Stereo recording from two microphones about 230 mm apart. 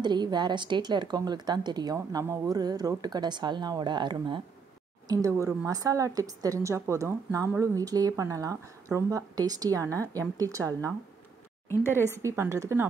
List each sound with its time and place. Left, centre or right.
0.0 s a woman's voice: centre
11.7 s speech: centre
12.1 s a woman's voice: centre